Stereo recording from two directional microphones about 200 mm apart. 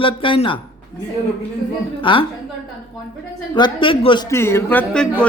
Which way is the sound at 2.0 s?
25° left (ahead or behind).